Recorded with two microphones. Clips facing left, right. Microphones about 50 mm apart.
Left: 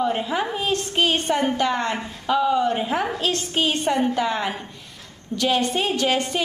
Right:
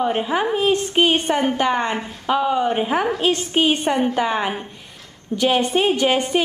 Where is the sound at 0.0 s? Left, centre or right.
Right.